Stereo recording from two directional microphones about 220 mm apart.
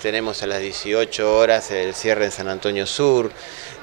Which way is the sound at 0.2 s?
30° right (ahead or behind).